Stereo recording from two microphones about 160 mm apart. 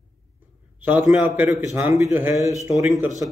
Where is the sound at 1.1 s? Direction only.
10° right (ahead or behind).